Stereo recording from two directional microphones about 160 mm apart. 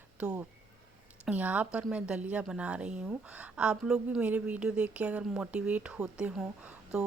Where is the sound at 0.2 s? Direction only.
5° right (ahead or behind).